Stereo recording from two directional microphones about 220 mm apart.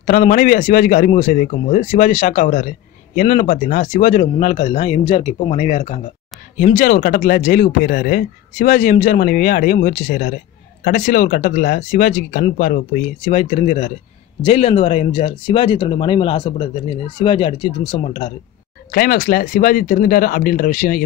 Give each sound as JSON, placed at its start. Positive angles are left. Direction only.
{"t": 0.0, "sound": "speech", "side_deg": 40}
{"t": 18.9, "sound": "speech", "side_deg": 40}